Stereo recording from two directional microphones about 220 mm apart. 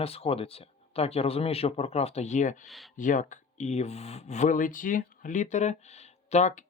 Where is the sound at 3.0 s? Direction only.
35° left (ahead or behind).